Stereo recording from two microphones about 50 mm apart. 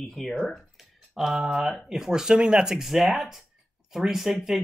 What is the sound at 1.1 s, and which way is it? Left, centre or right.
Speech, centre.